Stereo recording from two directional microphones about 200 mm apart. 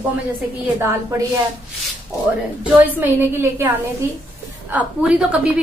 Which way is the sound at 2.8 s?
10° right (ahead or behind).